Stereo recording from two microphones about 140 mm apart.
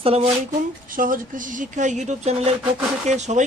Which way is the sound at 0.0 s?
45° right (ahead or behind).